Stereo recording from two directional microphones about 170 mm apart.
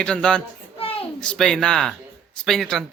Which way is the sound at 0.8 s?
35° left (ahead or behind).